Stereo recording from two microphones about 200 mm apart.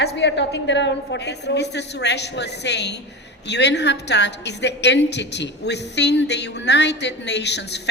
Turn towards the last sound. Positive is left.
turn(degrees=60)  # may be behind; listen again after turning